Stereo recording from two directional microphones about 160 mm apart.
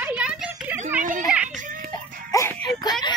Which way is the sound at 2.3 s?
20° left (ahead or behind).